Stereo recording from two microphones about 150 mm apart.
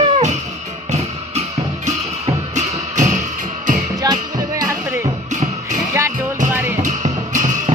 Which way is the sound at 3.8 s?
25° right (ahead or behind).